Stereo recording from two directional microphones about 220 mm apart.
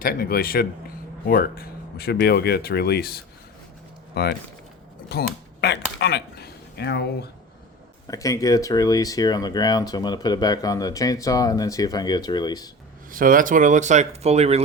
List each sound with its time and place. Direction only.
0.0 s a man's voice: 40° left (ahead or behind)
8.0 s speech: 15° left (ahead or behind)
13.1 s speech: 40° right (ahead or behind)